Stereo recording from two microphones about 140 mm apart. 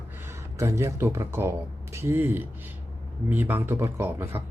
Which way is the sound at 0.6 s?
20° right (ahead or behind).